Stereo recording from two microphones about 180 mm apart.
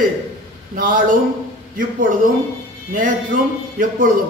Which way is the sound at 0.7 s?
50° right (ahead or behind).